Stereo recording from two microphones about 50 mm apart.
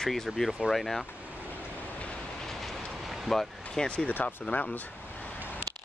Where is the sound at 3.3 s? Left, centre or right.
Centre.